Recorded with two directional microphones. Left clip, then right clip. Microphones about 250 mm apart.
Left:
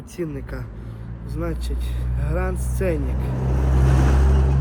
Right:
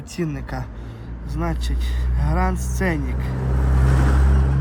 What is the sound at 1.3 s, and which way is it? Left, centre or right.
Speech, right.